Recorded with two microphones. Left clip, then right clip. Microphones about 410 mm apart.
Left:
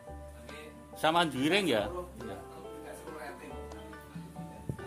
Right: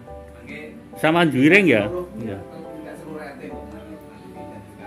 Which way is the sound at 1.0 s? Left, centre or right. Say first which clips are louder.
Right 11 dB; left.